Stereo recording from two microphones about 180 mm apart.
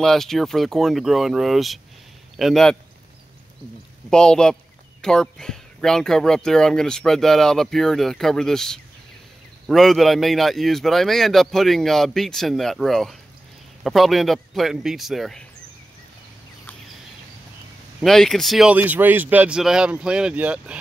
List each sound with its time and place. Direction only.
0.0 s speech: centre (ahead or behind)
4.1 s speech: 5° left (ahead or behind)
18.0 s speech: centre (ahead or behind)